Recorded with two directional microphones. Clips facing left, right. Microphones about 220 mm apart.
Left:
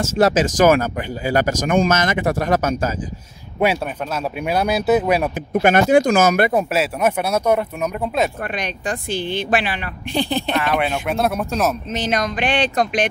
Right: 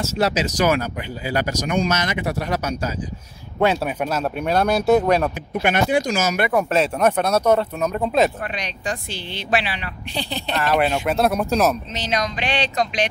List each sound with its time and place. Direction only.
0.0 s speech: 50° left (ahead or behind)
3.5 s speech: 10° left (ahead or behind)
3.8 s speech: 5° right (ahead or behind)
4.4 s speech: 5° left (ahead or behind)
5.5 s speech: 45° left (ahead or behind)
6.7 s speech: 5° left (ahead or behind)
8.5 s speech: 50° left (ahead or behind)
10.6 s speech: centre (ahead or behind)
11.9 s speech: 50° left (ahead or behind)